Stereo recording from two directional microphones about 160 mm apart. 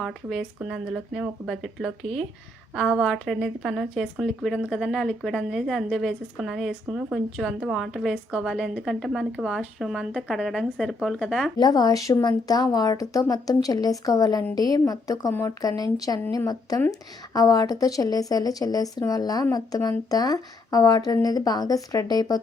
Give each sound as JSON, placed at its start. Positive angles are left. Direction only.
{"t": 0.0, "sound": "a woman's voice", "side_deg": 0}
{"t": 11.5, "sound": "a woman's voice", "side_deg": 25}